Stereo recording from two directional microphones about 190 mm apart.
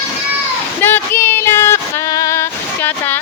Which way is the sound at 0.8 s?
10° left (ahead or behind).